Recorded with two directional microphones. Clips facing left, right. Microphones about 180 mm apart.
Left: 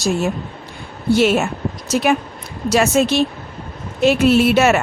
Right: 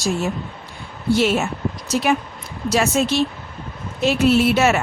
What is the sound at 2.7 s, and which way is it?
Speech, 65° left (ahead or behind).